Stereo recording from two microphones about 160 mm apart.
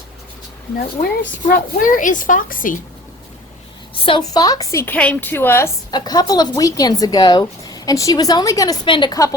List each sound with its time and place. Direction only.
1.0 s a woman's voice: 65° left (ahead or behind)
3.9 s a woman's voice: 30° left (ahead or behind)